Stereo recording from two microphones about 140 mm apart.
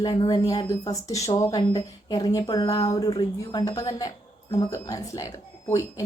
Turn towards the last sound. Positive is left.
turn(degrees=25)  # may be behind; listen again after turning